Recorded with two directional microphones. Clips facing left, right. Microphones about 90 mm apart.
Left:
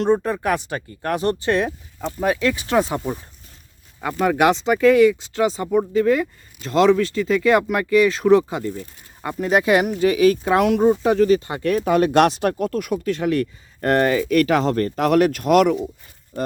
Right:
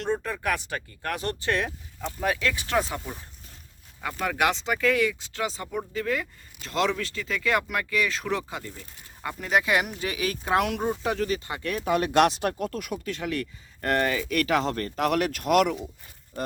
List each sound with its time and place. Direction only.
0.0 s speech: 25° left (ahead or behind)
4.0 s speech: 30° left (ahead or behind)
11.7 s speech: 50° left (ahead or behind)